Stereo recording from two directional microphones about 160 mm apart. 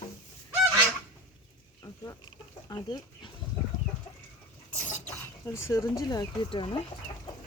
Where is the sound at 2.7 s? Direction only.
25° left (ahead or behind).